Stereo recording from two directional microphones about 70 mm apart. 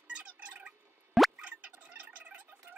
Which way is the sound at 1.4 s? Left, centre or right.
Centre.